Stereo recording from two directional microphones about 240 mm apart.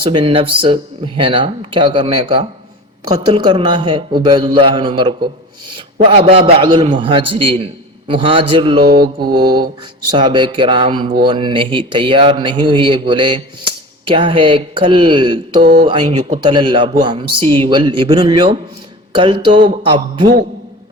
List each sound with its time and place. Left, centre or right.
0.0 s a man's voice: right
9.3 s mantra: centre
10.1 s a man's voice: centre
15.6 s speech: right
15.9 s a man's voice: centre